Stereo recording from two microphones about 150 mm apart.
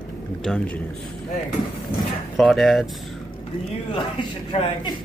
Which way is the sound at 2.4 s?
Centre (ahead or behind).